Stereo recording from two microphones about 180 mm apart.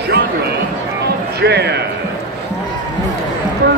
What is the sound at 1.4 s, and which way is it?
Speech, 70° right (ahead or behind).